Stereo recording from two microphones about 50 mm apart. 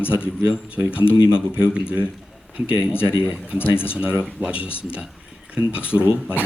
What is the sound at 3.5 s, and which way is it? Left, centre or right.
Speech, left.